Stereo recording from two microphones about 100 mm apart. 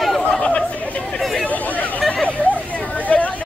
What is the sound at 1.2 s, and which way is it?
Chatter, centre (ahead or behind).